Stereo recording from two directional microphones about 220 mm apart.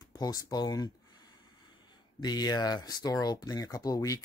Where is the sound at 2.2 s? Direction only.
20° left (ahead or behind).